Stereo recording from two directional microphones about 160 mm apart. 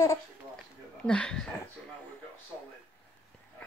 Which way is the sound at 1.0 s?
5° left (ahead or behind).